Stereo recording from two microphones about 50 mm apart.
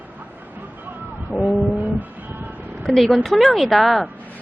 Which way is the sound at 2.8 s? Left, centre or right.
Centre.